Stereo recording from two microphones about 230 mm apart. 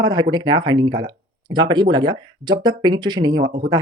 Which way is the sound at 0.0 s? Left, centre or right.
Centre.